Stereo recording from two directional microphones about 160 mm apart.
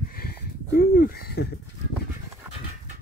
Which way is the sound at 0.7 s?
65° left (ahead or behind).